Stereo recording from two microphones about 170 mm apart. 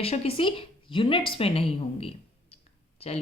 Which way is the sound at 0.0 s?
35° left (ahead or behind).